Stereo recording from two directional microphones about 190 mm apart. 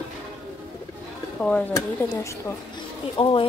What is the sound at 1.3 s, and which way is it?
Speech, 5° left (ahead or behind).